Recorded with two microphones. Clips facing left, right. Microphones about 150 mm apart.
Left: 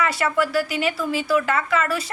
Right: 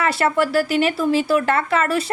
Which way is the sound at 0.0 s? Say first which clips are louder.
Right 3 dB; 30° right (ahead or behind).